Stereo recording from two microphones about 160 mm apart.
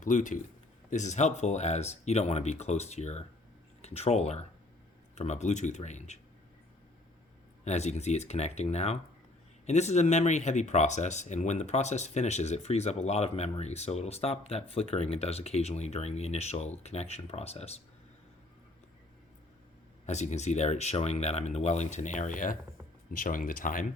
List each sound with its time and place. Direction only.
0.0 s speech: 50° left (ahead or behind)
7.6 s speech: 45° left (ahead or behind)
20.1 s speech: 45° left (ahead or behind)